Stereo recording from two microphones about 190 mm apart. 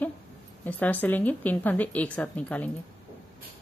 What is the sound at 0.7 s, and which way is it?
A woman's voice, 10° left (ahead or behind).